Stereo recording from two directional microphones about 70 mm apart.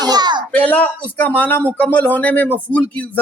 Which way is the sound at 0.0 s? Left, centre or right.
Right.